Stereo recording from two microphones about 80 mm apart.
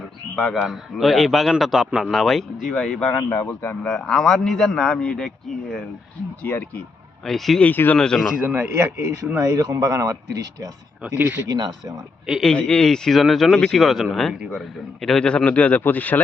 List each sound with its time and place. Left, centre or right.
0.5 s a man's voice: centre
3.1 s speech: left
3.8 s speech: centre
6.4 s speech: left
7.3 s a man's voice: centre
7.6 s speech: left
7.9 s speech: centre
8.4 s speech: right
11.0 s speech: right
11.4 s speech: right
12.4 s speech: centre